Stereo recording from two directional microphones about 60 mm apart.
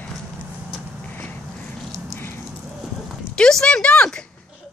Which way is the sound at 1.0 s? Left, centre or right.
Left.